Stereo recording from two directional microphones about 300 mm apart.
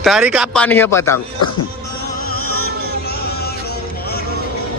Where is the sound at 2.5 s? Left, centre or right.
Left.